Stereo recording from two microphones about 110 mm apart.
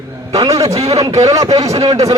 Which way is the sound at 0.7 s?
70° right (ahead or behind).